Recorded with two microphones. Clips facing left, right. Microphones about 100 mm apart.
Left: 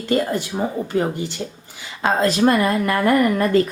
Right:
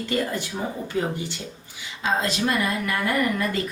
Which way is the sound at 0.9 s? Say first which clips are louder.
Left 5 dB; 50° left (ahead or behind).